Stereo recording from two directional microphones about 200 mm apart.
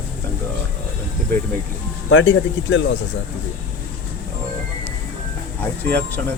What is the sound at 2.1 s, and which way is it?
Speech, 70° left (ahead or behind).